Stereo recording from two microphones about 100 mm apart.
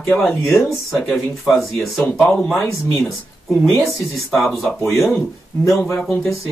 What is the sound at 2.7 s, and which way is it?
Speech, 30° left (ahead or behind).